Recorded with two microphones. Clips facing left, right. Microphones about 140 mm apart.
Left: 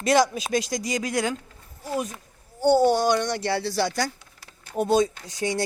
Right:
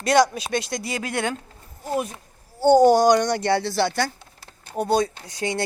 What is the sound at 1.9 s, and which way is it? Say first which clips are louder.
Speech: right 3 dB; 25° right (ahead or behind).